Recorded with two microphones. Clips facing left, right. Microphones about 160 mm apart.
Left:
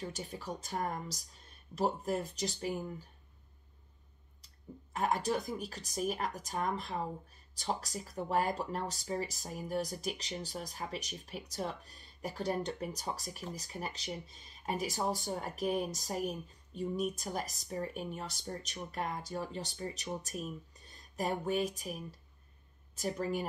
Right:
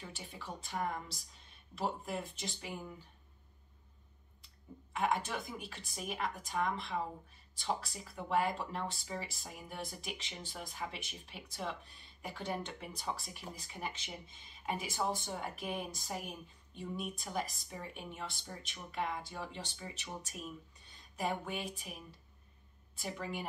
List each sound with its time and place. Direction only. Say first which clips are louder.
0.0 s speech: left 7 dB; 40° left (ahead or behind)
4.9 s a woman's voice: left 3 dB; 40° left (ahead or behind)